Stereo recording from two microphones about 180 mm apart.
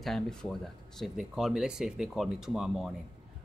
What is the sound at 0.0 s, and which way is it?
Speech, centre (ahead or behind).